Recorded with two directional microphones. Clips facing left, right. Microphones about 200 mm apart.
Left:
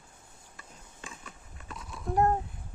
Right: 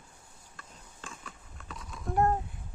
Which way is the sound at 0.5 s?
5° left (ahead or behind).